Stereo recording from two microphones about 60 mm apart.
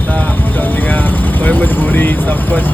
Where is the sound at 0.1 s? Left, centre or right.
Left.